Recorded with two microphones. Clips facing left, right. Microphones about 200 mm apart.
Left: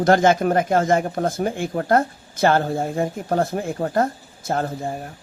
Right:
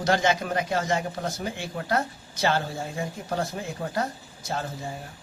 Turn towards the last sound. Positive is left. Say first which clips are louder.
# left 8 dB
turn(degrees=55)  # may be behind; listen again after turning